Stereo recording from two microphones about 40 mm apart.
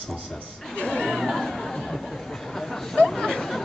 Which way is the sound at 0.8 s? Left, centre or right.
Left.